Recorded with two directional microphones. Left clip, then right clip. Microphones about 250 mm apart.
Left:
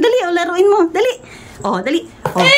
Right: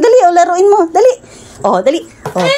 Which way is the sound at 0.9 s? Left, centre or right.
Centre.